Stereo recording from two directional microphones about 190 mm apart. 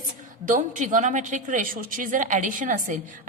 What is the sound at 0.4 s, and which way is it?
A woman's voice, 40° right (ahead or behind).